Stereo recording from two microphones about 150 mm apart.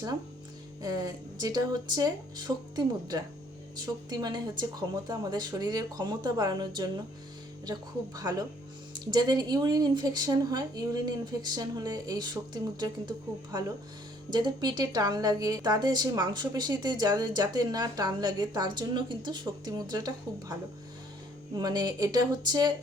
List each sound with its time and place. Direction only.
0.8 s a woman's voice: 25° right (ahead or behind)